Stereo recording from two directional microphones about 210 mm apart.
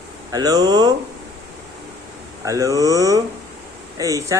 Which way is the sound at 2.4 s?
15° right (ahead or behind).